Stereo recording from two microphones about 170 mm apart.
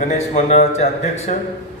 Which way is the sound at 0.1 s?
45° left (ahead or behind).